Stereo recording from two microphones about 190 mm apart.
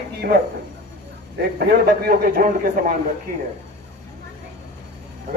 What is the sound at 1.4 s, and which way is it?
A man's voice, 55° right (ahead or behind).